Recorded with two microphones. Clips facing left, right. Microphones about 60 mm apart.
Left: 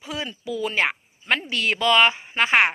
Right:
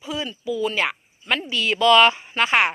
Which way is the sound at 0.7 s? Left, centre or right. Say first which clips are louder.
Left 1 dB; left.